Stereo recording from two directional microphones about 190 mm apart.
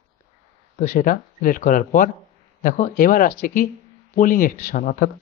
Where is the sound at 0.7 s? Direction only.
45° left (ahead or behind).